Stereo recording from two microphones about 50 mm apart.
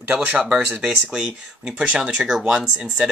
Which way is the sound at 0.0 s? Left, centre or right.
Right.